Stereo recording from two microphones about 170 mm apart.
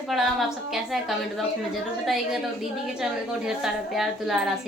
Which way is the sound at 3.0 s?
5° right (ahead or behind).